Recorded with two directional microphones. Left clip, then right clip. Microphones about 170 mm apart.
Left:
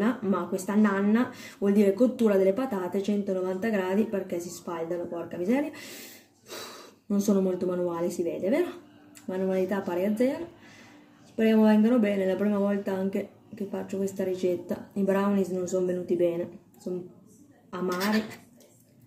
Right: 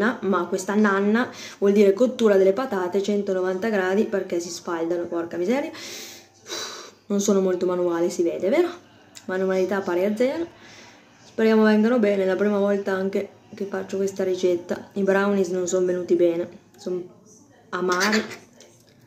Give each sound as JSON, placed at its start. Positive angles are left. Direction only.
{"t": 0.0, "sound": "speech", "side_deg": 15}
{"t": 11.3, "sound": "speech", "side_deg": 15}
{"t": 17.9, "sound": "speech", "side_deg": -30}